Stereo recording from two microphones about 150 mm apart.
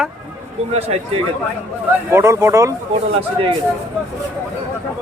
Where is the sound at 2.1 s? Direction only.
20° right (ahead or behind).